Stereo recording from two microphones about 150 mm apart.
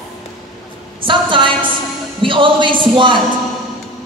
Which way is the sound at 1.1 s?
35° right (ahead or behind).